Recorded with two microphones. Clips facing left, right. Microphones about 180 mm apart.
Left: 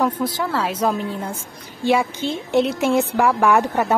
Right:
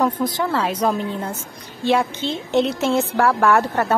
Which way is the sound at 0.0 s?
5° left (ahead or behind).